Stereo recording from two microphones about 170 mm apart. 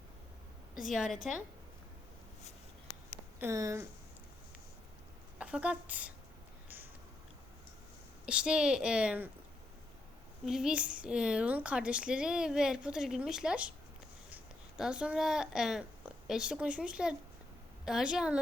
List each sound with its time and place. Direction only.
0.9 s a woman's voice: centre (ahead or behind)
3.4 s speech: 15° right (ahead or behind)
5.4 s speech: 5° right (ahead or behind)
8.3 s a woman's voice: 5° right (ahead or behind)
10.4 s a woman's voice: 5° right (ahead or behind)